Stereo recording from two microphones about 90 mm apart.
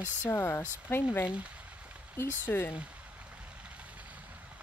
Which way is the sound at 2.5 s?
20° left (ahead or behind).